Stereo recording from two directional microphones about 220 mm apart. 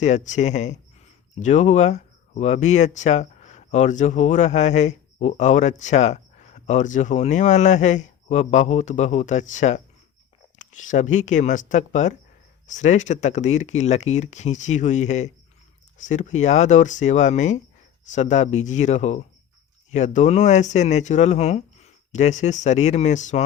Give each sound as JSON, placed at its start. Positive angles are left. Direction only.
{"t": 0.0, "sound": "speech", "side_deg": 35}